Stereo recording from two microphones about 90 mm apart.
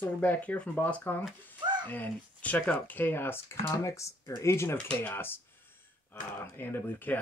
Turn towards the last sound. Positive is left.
turn(degrees=20)  # may be behind; listen again after turning